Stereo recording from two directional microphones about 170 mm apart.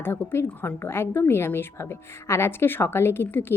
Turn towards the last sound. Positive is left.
turn(degrees=15)  # may be behind; listen again after turning